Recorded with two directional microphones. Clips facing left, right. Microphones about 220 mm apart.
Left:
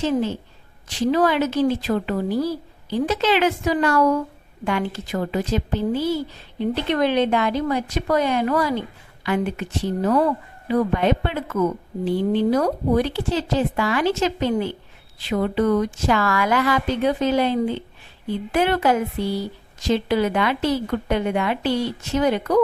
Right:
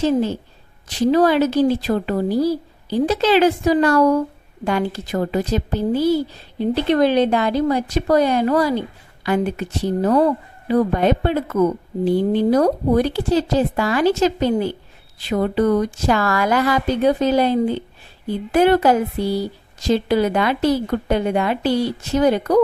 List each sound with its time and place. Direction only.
0.0 s speech: 40° right (ahead or behind)